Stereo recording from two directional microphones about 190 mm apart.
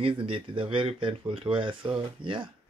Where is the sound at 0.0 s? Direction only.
25° right (ahead or behind).